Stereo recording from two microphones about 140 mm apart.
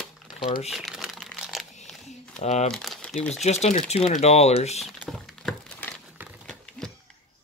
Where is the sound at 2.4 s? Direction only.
50° left (ahead or behind).